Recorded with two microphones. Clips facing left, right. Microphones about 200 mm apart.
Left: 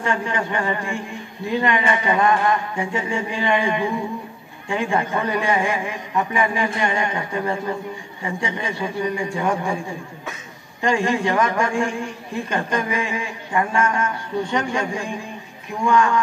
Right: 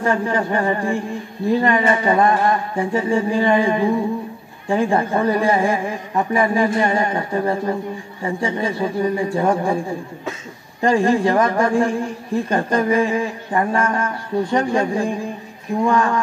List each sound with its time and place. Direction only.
0.0 s a man's voice: 35° right (ahead or behind)
10.8 s a man's voice: 35° right (ahead or behind)